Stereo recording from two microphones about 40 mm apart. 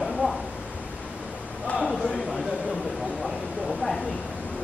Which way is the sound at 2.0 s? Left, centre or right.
Centre.